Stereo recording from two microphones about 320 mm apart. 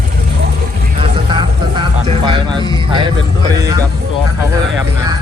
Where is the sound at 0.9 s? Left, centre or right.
Centre.